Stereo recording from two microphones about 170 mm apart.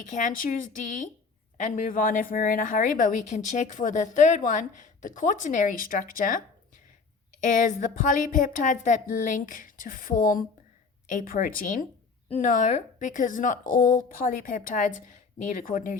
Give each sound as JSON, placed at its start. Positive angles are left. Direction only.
{"t": 0.0, "sound": "a woman's voice", "side_deg": 50}
{"t": 7.4, "sound": "a woman's voice", "side_deg": 50}